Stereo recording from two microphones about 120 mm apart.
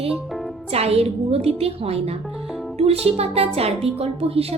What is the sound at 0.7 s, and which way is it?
A woman's voice, 60° right (ahead or behind).